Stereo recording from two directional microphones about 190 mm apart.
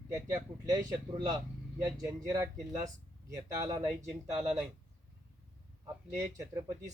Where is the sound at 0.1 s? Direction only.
15° right (ahead or behind).